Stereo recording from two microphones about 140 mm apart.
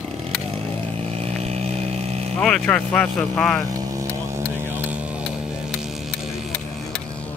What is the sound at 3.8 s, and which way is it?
Vehicle, 20° right (ahead or behind).